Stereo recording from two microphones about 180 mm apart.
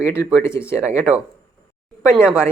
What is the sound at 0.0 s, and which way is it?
Speech, 15° left (ahead or behind).